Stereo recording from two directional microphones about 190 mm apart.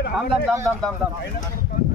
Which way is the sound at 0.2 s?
Centre (ahead or behind).